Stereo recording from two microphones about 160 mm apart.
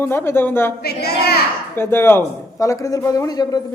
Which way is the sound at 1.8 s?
15° left (ahead or behind).